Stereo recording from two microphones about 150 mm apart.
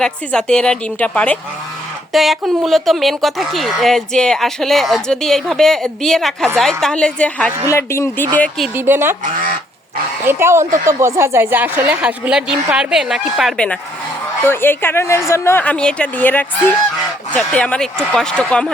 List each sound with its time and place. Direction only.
0.0 s a woman's voice: 5° left (ahead or behind)
7.7 s a woman's voice: 20° left (ahead or behind)
8.7 s a woman's voice: 15° right (ahead or behind)
9.2 s speech: 65° right (ahead or behind)
10.2 s a woman's voice: 15° right (ahead or behind); by 13.7 s 5° left (ahead or behind)
14.4 s a woman's voice: 15° left (ahead or behind)